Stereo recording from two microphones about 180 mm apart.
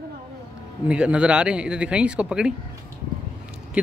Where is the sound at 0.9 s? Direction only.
5° right (ahead or behind).